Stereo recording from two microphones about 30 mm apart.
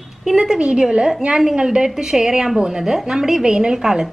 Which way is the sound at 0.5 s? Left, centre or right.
Right.